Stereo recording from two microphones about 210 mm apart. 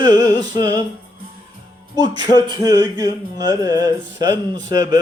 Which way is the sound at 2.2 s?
20° right (ahead or behind).